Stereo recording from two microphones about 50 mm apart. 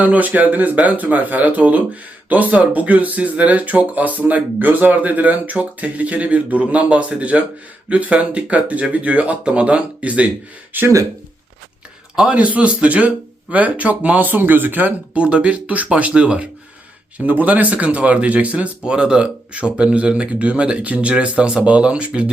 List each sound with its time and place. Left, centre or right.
0.0 s speech: right
10.7 s speech: right
12.3 s speech: right
18.9 s speech: centre